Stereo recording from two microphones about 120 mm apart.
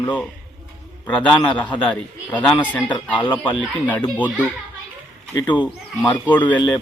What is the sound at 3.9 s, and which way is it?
Speech, 15° left (ahead or behind).